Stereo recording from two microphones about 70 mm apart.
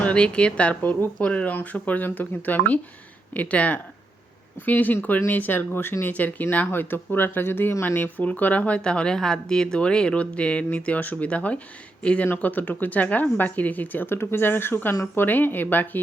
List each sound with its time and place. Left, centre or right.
0.0 s speech: centre